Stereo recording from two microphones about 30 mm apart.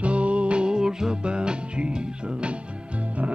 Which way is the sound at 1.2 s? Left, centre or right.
Right.